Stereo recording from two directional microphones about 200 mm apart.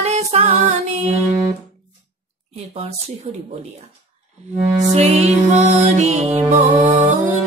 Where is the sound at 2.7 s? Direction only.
30° right (ahead or behind).